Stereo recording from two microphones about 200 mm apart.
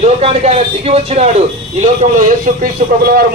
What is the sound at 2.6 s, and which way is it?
Speech, 50° right (ahead or behind).